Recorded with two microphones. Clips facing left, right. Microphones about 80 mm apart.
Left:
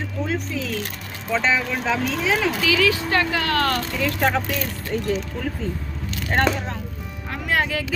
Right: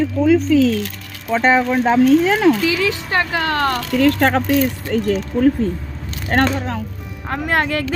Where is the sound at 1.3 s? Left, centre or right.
Right.